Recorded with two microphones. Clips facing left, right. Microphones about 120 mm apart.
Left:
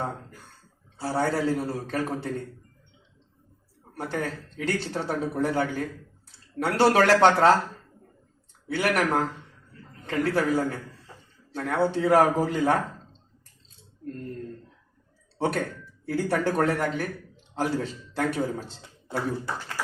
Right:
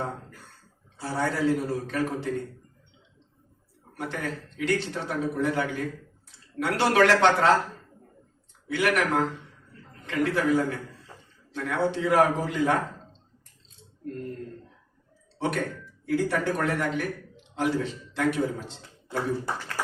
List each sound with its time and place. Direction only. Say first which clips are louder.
1.0 s a man's voice: left 1 dB; 35° left (ahead or behind)
3.9 s a man's voice: left 2 dB; 35° left (ahead or behind)
8.6 s a man's voice: even; 35° left (ahead or behind)
15.4 s a man's voice: left 1 dB; 35° left (ahead or behind)